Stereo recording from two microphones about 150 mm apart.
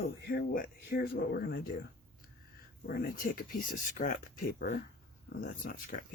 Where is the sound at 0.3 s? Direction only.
75° left (ahead or behind).